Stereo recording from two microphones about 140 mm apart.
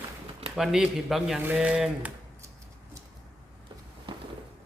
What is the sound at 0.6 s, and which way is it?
Speech, 5° right (ahead or behind).